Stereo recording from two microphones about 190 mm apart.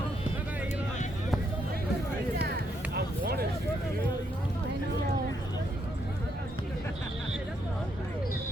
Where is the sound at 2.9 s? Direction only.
55° right (ahead or behind).